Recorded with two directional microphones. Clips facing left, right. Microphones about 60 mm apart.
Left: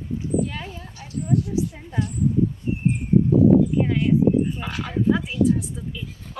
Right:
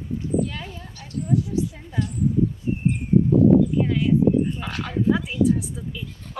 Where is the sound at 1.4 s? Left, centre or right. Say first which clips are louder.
Left 1 dB; left.